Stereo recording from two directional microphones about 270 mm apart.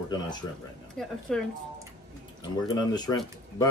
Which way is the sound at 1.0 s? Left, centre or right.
Centre.